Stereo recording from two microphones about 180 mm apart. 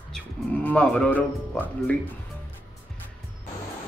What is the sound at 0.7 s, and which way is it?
A man's voice, 5° left (ahead or behind).